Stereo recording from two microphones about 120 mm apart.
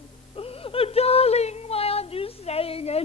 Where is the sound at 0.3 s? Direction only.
50° left (ahead or behind).